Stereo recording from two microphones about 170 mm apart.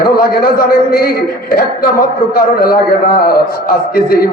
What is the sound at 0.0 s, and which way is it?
A man's voice, 60° left (ahead or behind).